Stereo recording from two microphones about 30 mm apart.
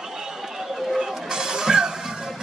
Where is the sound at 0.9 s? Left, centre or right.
Centre.